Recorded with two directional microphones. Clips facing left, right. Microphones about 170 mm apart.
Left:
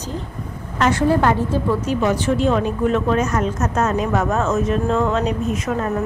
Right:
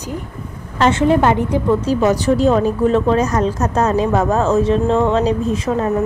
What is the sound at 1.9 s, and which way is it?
A woman's voice, 40° right (ahead or behind).